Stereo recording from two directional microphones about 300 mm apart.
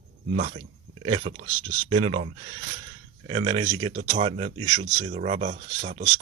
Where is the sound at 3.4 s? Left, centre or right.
Centre.